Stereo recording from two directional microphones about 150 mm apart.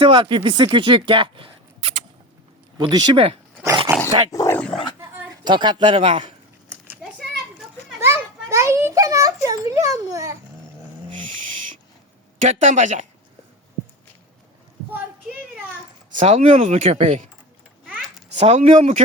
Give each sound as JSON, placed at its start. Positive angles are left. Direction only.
{"t": 0.0, "sound": "speech", "side_deg": -35}
{"t": 2.7, "sound": "speech", "side_deg": -30}
{"t": 4.0, "sound": "speech", "side_deg": 20}
{"t": 4.9, "sound": "speech", "side_deg": -30}
{"t": 6.9, "sound": "a sound", "side_deg": -5}
{"t": 8.0, "sound": "children playing", "side_deg": -20}
{"t": 12.5, "sound": "speech", "side_deg": -55}
{"t": 16.2, "sound": "speech", "side_deg": -40}
{"t": 18.3, "sound": "speech", "side_deg": -45}